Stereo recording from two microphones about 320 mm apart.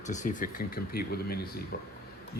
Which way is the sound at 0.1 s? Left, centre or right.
Left.